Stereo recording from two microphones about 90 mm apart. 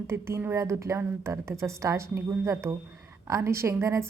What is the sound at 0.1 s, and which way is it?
A woman's voice, 30° right (ahead or behind).